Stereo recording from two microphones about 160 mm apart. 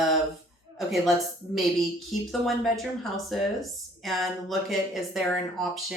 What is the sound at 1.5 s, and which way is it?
Speech, centre (ahead or behind).